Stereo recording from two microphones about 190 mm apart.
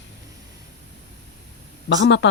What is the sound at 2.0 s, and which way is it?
Speech, 70° left (ahead or behind).